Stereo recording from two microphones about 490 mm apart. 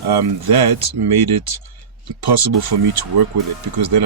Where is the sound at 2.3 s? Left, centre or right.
Right.